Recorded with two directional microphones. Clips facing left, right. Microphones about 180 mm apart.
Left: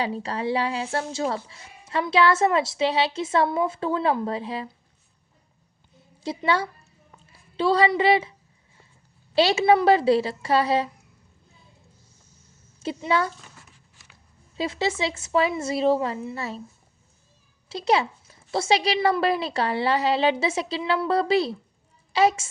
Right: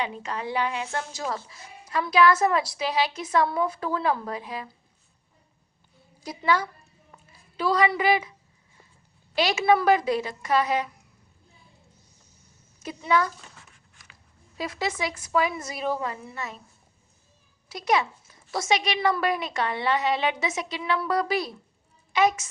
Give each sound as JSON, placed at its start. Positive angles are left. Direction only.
{"t": 0.0, "sound": "speech", "side_deg": 35}
{"t": 6.2, "sound": "speech", "side_deg": 30}
{"t": 9.3, "sound": "speech", "side_deg": 30}
{"t": 12.8, "sound": "speech", "side_deg": 30}
{"t": 14.5, "sound": "speech", "side_deg": 25}
{"t": 17.7, "sound": "speech", "side_deg": 30}